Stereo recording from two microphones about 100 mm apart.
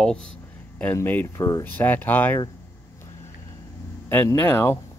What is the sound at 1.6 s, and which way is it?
Speech, 20° left (ahead or behind).